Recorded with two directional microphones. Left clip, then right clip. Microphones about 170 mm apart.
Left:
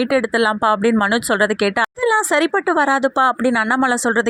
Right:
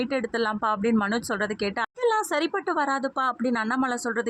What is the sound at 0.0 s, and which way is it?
Speech, 25° left (ahead or behind).